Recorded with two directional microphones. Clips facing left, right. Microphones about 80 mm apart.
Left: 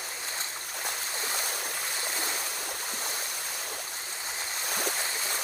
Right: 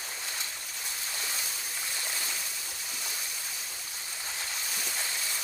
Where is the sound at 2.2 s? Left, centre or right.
Left.